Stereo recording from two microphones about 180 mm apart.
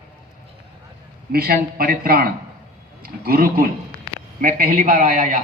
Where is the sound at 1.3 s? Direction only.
55° right (ahead or behind).